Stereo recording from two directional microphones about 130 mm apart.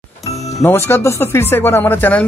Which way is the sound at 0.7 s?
20° left (ahead or behind).